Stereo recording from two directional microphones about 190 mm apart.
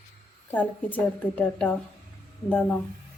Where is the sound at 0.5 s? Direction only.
10° left (ahead or behind).